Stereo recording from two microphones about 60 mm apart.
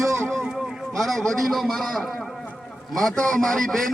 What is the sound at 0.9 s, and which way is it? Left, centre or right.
A man's voice, centre.